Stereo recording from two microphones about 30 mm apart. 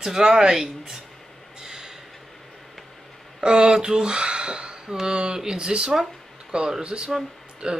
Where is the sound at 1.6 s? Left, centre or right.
Centre.